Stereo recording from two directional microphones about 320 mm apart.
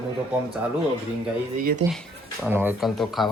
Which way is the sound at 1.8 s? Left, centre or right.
Centre.